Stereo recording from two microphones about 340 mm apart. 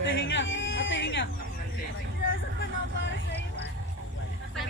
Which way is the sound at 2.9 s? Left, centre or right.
Left.